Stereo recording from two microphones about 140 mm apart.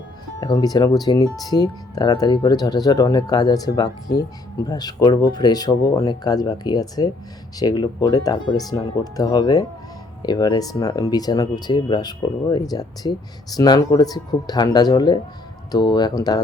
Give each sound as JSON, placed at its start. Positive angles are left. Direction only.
{"t": 0.3, "sound": "speech", "side_deg": 25}